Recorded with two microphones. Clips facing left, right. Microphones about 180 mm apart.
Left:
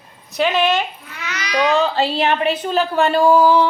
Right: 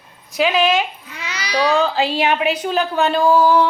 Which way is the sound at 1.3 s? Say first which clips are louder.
Even; 30° right (ahead or behind).